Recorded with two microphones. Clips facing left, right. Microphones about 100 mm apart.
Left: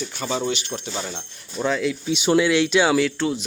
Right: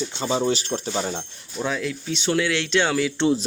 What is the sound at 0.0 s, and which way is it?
Speech, 25° right (ahead or behind).